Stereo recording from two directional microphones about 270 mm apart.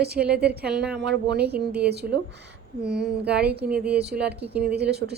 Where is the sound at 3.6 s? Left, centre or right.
Centre.